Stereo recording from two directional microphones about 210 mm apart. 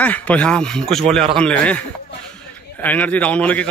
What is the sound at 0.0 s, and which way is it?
A man's voice, 5° left (ahead or behind).